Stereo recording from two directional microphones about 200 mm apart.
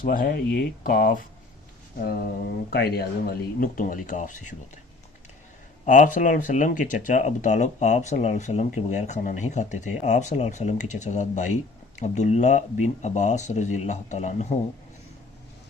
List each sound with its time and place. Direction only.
0.0 s speech: 45° left (ahead or behind)
5.8 s speech: 40° left (ahead or behind)